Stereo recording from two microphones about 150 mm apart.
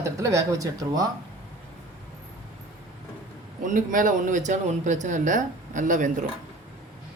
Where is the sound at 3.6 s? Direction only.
60° right (ahead or behind).